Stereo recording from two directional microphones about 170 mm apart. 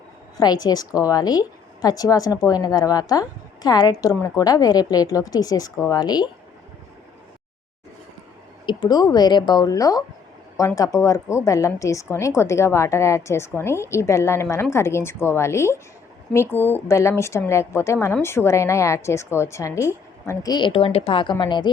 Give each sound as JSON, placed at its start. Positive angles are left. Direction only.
{"t": 0.3, "sound": "a woman's voice", "side_deg": 25}
{"t": 8.6, "sound": "a woman's voice", "side_deg": 25}